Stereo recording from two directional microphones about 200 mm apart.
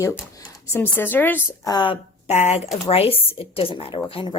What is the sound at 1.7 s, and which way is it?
A woman's voice, 25° left (ahead or behind).